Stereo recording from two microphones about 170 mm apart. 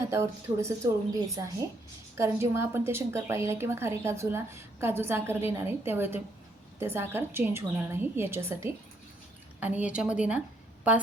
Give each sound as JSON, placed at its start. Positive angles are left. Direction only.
{"t": 0.0, "sound": "a woman's voice", "side_deg": -15}